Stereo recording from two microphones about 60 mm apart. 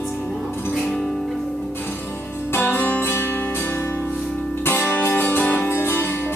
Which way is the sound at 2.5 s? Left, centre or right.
Left.